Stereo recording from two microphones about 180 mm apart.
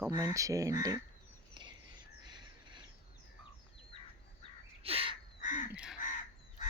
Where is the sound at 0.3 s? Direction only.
20° right (ahead or behind).